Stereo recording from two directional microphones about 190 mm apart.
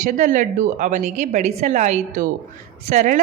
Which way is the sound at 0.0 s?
40° right (ahead or behind).